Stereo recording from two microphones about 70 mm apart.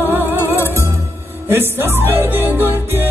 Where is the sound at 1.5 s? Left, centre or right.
Right.